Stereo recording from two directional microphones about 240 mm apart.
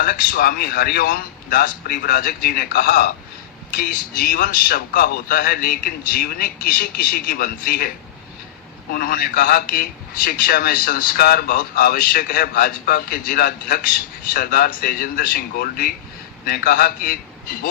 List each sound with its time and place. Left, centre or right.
0.0 s a man's voice: left